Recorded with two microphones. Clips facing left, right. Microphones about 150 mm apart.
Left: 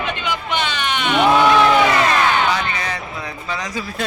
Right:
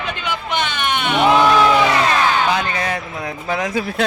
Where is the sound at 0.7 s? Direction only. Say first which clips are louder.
Right 1 dB; 55° right (ahead or behind).